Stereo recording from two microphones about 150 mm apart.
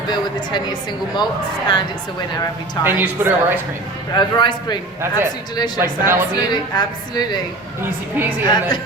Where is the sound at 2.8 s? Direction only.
25° left (ahead or behind).